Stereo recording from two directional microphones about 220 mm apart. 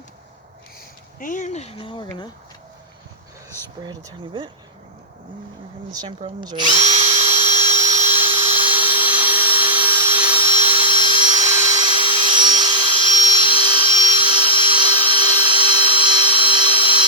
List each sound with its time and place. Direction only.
1.2 s speech: 35° left (ahead or behind); by 2.3 s 20° left (ahead or behind)
3.8 s speech: 20° right (ahead or behind)
5.9 s speech: 20° right (ahead or behind)
6.7 s drill: 30° right (ahead or behind)
7.9 s a sound: 25° right (ahead or behind)
9.4 s wood: 25° right (ahead or behind)
11.4 s a sound: 15° right (ahead or behind)
13.9 s wood: 35° right (ahead or behind)
14.2 s tools: 20° right (ahead or behind)